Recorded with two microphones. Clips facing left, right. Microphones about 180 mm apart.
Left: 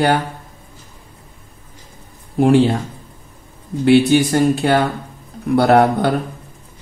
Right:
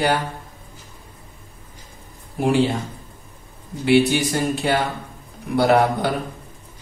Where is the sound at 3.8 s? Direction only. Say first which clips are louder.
Left 5 dB; 50° left (ahead or behind).